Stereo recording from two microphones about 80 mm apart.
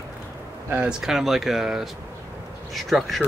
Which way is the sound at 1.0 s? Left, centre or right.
Centre.